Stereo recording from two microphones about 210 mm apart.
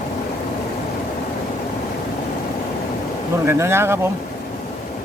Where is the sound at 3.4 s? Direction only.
10° right (ahead or behind).